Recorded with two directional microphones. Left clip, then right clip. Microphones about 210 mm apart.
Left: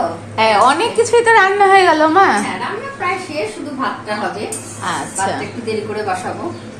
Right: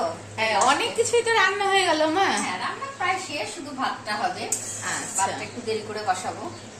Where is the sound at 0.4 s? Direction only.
15° left (ahead or behind).